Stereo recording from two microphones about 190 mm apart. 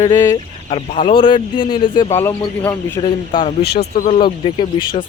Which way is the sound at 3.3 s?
25° left (ahead or behind).